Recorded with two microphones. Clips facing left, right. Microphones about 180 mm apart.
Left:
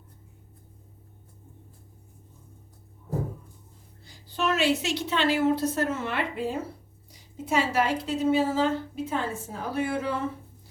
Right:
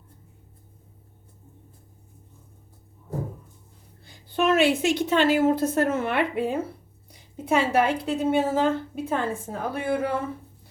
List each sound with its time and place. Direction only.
4.0 s a woman's voice: 55° right (ahead or behind)